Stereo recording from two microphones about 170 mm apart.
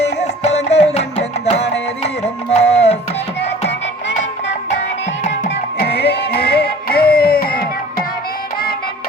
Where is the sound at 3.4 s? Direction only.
90° left.